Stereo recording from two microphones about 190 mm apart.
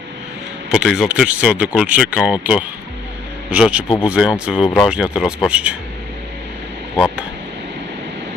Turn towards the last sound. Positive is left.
turn(degrees=-5)  # may be behind; listen again after turning